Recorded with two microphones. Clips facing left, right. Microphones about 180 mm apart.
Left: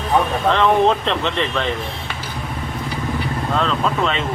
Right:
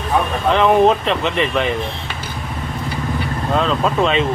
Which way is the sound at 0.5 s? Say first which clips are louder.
Right 4 dB; 10° right (ahead or behind).